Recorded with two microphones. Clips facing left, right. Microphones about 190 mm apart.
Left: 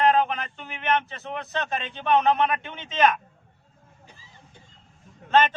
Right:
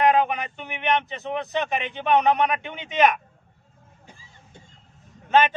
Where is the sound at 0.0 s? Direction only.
15° right (ahead or behind).